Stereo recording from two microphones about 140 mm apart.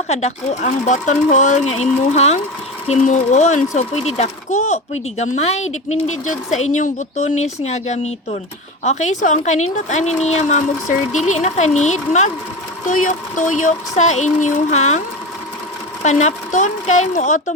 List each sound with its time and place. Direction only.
0.1 s speech: 50° left (ahead or behind)
12.9 s speech: 70° left (ahead or behind)
16.0 s speech: 55° left (ahead or behind)